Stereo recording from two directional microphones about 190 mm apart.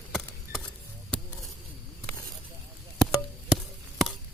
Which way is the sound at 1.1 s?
5° left (ahead or behind).